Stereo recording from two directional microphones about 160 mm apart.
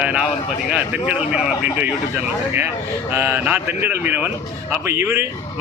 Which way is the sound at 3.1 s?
15° right (ahead or behind).